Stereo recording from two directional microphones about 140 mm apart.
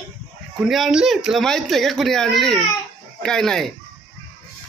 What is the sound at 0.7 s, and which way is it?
Speech, 5° right (ahead or behind).